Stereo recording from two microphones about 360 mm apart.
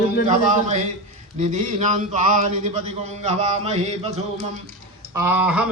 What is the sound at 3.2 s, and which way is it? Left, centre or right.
Speech, centre.